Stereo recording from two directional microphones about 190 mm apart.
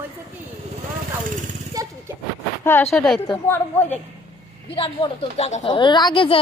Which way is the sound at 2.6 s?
10° left (ahead or behind).